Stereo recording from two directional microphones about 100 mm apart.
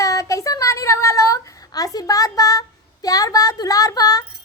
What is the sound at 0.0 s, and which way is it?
A woman's voice, 35° left (ahead or behind).